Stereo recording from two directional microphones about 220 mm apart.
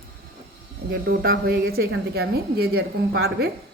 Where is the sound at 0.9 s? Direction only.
40° right (ahead or behind).